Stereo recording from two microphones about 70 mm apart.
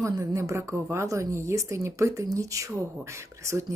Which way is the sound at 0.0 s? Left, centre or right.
Right.